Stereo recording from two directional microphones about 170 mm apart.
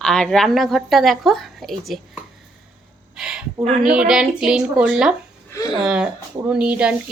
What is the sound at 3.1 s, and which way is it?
A woman's voice, 5° right (ahead or behind).